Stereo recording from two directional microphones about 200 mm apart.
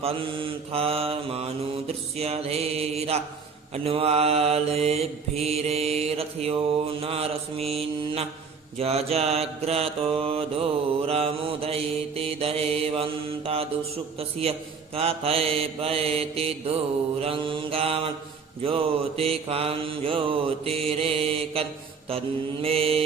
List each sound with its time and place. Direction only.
0.0 s mantra: 25° right (ahead or behind)